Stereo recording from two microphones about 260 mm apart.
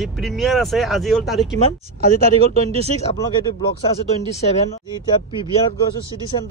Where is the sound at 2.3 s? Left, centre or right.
Right.